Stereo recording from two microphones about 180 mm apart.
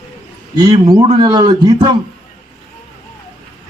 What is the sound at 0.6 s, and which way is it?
Speech, 20° right (ahead or behind).